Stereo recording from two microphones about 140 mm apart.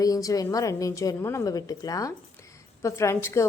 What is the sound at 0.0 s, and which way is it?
A woman's voice, 25° left (ahead or behind).